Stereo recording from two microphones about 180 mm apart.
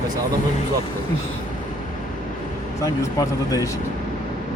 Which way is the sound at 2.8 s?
20° left (ahead or behind).